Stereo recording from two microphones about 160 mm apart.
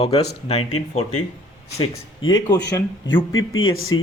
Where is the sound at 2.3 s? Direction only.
25° left (ahead or behind).